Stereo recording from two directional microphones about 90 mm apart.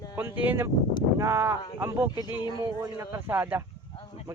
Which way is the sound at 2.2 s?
55° left (ahead or behind).